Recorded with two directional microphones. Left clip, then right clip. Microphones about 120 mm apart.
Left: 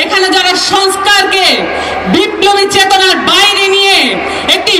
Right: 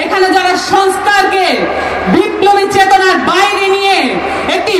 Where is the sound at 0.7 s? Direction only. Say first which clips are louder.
Even; 20° left (ahead or behind).